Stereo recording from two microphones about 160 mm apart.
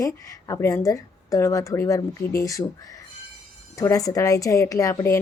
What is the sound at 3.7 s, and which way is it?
A woman's voice, 20° left (ahead or behind).